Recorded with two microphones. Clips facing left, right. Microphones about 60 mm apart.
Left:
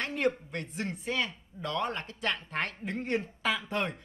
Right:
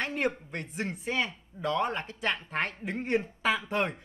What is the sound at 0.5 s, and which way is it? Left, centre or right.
A man's voice, centre.